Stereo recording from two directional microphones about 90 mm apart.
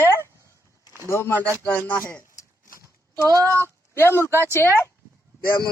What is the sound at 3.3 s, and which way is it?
Speech, 45° right (ahead or behind).